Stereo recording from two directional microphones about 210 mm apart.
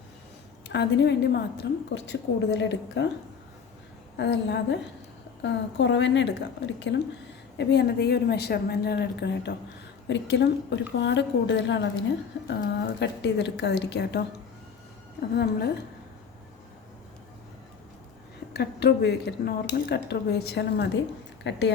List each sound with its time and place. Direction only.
0.7 s a woman's voice: 55° left (ahead or behind)
4.2 s a woman's voice: 55° left (ahead or behind)
13.0 s a woman's voice: 55° left (ahead or behind)
15.4 s speech: 50° left (ahead or behind)
18.5 s a woman's voice: 50° left (ahead or behind)